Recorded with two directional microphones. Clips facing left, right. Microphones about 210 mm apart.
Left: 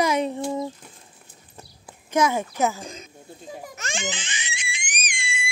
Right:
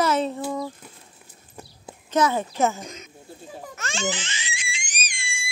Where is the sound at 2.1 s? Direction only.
10° left (ahead or behind).